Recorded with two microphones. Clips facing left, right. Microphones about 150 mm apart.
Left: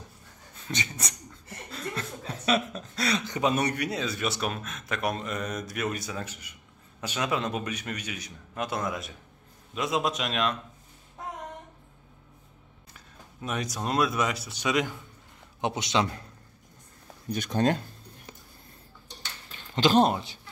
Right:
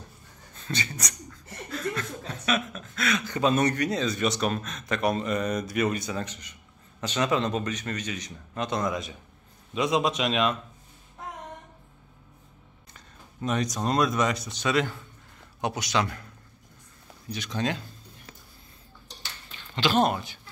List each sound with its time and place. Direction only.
0.7 s laughter: 20° left (ahead or behind)
3.3 s a man's voice: 15° left (ahead or behind); by 10.6 s centre (ahead or behind)
12.9 s speech: 5° left (ahead or behind)
15.6 s a man's voice: 25° left (ahead or behind)
17.3 s speech: 50° left (ahead or behind)
19.7 s a man's voice: 35° left (ahead or behind)